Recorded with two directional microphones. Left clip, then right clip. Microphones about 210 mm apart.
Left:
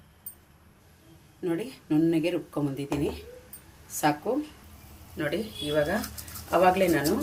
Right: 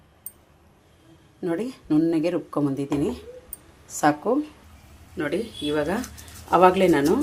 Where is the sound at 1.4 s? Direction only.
30° right (ahead or behind).